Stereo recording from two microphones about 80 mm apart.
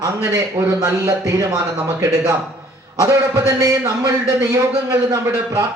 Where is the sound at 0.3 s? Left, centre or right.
Right.